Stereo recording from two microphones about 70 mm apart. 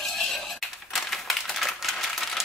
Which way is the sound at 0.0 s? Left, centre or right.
Centre.